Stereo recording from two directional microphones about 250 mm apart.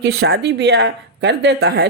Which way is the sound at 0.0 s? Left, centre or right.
Right.